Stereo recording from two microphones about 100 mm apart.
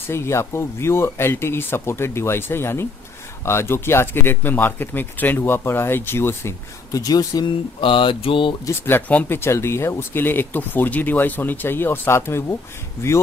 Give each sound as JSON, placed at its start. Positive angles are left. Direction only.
{"t": 0.1, "sound": "speech", "side_deg": 25}
{"t": 6.9, "sound": "speech", "side_deg": 35}
{"t": 7.4, "sound": "mantra", "side_deg": 55}
{"t": 8.6, "sound": "speech", "side_deg": 20}